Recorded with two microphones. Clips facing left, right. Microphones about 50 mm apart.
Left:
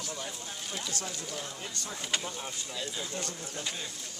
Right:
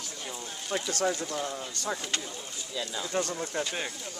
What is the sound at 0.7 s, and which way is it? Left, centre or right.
Speech, right.